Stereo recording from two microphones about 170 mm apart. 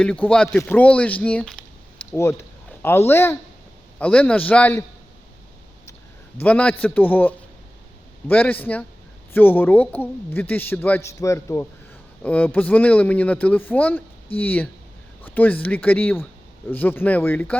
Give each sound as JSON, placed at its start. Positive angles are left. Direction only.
{"t": 0.0, "sound": "a woman's voice", "side_deg": 5}
{"t": 6.4, "sound": "a woman's voice", "side_deg": 10}